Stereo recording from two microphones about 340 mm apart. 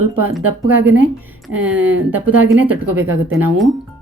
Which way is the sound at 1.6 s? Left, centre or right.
Centre.